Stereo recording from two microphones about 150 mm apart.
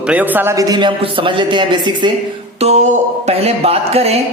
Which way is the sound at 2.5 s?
45° right (ahead or behind).